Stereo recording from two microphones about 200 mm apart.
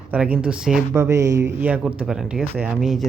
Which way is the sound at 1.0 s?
15° right (ahead or behind).